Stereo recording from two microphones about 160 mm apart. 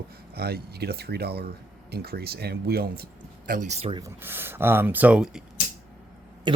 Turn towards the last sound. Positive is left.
turn(degrees=-30)  # may be behind; listen again after turning